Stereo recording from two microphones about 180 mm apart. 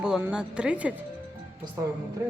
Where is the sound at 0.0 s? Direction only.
5° right (ahead or behind).